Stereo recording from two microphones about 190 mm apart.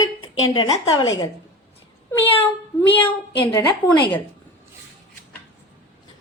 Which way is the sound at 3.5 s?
20° left (ahead or behind).